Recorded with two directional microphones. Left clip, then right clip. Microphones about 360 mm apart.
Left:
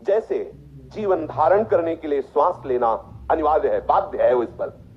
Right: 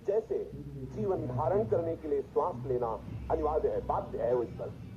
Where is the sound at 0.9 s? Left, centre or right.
Left.